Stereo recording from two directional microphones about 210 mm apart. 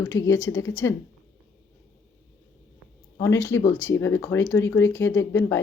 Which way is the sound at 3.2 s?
15° left (ahead or behind).